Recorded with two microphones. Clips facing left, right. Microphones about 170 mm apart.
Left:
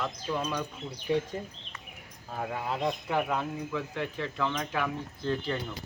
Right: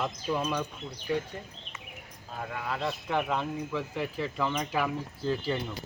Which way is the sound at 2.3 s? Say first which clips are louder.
Left 2 dB; 35° left (ahead or behind).